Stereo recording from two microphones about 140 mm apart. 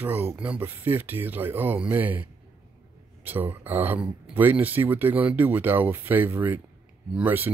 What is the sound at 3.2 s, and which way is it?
Speech, 15° right (ahead or behind).